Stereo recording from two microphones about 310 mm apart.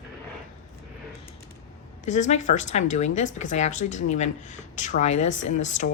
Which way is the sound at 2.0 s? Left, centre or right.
Left.